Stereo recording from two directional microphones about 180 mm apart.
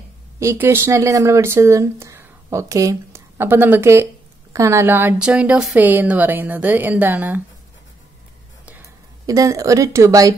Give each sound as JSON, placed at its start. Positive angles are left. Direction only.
{"t": 0.4, "sound": "speech", "side_deg": -15}
{"t": 9.2, "sound": "speech", "side_deg": -20}